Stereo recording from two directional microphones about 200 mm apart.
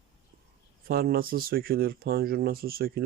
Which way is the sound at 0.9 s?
50° right (ahead or behind).